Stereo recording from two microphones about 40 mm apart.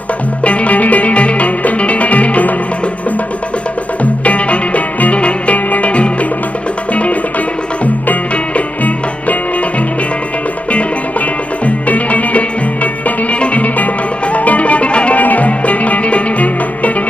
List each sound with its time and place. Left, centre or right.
0.4 s music: left
4.0 s music: left
11.6 s music: left
15.2 s music: left